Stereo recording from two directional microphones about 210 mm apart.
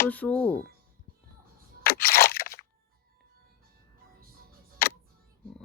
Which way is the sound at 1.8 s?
45° left (ahead or behind).